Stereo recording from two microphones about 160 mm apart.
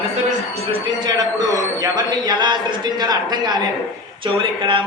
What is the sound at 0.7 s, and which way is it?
A man's voice, 25° right (ahead or behind).